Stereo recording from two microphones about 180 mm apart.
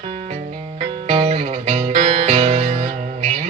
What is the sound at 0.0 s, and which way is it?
Music, 35° right (ahead or behind).